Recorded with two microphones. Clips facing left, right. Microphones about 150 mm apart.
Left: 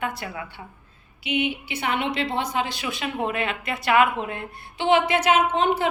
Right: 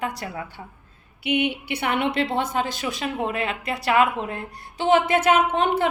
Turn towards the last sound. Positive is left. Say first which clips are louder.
# even
turn(degrees=-55)  # may be behind; listen again after turning